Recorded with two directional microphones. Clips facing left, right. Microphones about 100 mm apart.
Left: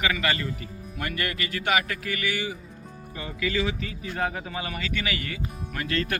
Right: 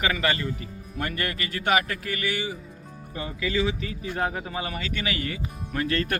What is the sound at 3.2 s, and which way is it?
A man's voice, 25° right (ahead or behind).